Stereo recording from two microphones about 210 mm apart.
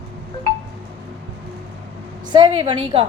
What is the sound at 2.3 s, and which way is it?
Speech, 20° right (ahead or behind).